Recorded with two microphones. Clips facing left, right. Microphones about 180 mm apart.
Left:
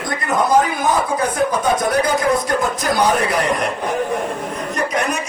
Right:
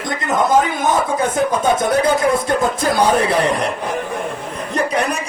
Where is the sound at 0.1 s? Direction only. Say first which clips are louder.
Right 1 dB; 20° right (ahead or behind).